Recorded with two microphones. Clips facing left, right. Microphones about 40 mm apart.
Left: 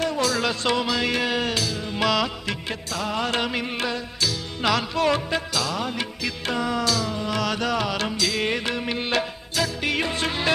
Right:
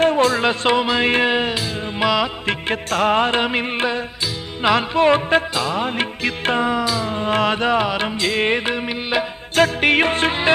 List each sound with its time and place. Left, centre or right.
0.0 s music: right; by 2.3 s centre
2.5 s music: right
6.7 s music: right
7.1 s music: right; by 9.2 s centre
9.6 s music: right